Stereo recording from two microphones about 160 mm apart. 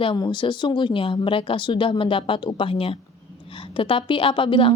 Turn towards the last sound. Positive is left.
turn(degrees=30)  # may be behind; listen again after turning